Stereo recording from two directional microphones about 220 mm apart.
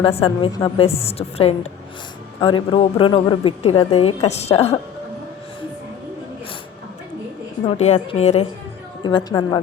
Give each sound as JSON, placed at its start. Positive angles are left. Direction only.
{"t": 0.0, "sound": "a woman's voice", "side_deg": 25}
{"t": 7.7, "sound": "a woman's voice", "side_deg": 30}
{"t": 9.0, "sound": "a woman's voice", "side_deg": 20}